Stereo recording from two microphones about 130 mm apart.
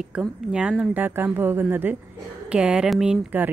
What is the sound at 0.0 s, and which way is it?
Speech, 5° right (ahead or behind).